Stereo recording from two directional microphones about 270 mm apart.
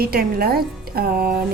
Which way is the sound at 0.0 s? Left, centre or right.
Right.